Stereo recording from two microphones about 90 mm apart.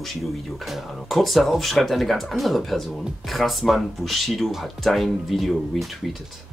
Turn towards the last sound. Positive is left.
turn(degrees=0)  # may be behind; listen again after turning